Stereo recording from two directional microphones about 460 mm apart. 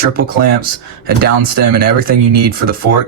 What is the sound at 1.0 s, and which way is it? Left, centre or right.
Speech, centre.